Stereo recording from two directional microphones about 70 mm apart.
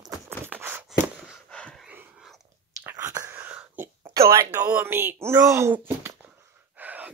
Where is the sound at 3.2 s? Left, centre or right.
Right.